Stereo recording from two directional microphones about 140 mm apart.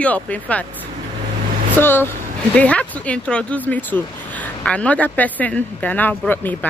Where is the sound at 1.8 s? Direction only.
15° left (ahead or behind).